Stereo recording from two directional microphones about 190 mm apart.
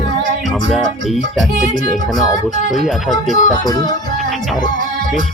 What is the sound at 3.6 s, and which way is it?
Music, 20° left (ahead or behind).